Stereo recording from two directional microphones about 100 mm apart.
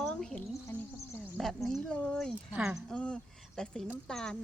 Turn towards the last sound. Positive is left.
turn(degrees=5)  # may be behind; listen again after turning